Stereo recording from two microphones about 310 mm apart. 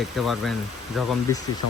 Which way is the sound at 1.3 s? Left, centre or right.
Centre.